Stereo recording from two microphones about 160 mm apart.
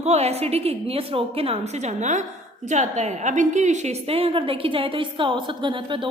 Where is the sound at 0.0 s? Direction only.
40° right (ahead or behind).